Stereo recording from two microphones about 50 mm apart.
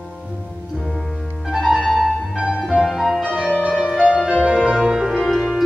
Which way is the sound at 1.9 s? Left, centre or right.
Centre.